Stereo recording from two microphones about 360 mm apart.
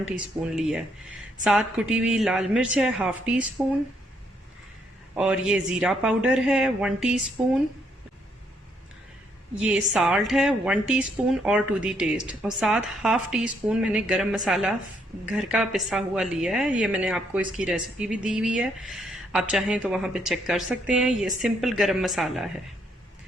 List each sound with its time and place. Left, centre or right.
0.1 s a woman's voice: centre
5.1 s a woman's voice: centre
9.6 s a woman's voice: centre